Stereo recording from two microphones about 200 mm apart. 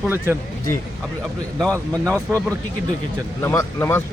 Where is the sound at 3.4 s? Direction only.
10° left (ahead or behind).